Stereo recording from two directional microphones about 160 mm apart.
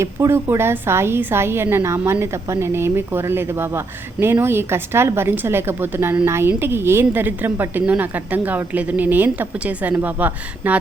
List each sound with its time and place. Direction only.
0.0 s a woman's voice: 15° right (ahead or behind)